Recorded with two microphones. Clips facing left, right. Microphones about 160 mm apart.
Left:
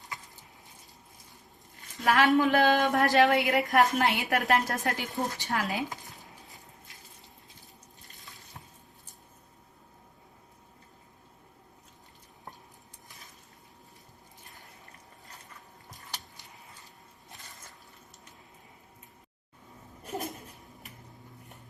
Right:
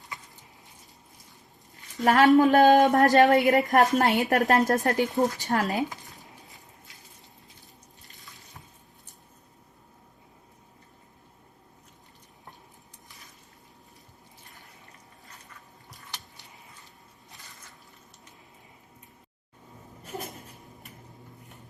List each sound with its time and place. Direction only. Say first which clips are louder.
2.0 s a woman's voice: right 5 dB; 40° right (ahead or behind)
6.1 s a sound: right 1 dB; centre (ahead or behind)
8.1 s sink: even; 40° left (ahead or behind)